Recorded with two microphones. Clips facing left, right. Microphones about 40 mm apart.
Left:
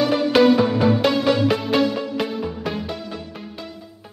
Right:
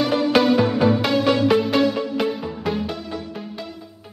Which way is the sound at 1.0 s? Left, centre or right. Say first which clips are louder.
Even; centre.